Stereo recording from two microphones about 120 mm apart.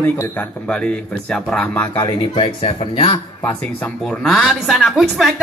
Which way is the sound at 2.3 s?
45° left (ahead or behind).